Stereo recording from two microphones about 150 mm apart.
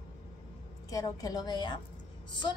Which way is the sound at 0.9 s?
25° left (ahead or behind).